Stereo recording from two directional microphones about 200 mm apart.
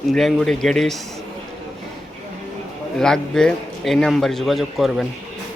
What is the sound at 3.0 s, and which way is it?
A man's voice, 5° left (ahead or behind).